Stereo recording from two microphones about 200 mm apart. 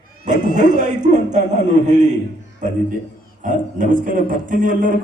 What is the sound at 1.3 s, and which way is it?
Speech, 35° right (ahead or behind).